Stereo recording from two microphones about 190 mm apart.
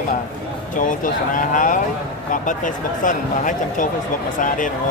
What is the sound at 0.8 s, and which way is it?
Speech, 45° left (ahead or behind).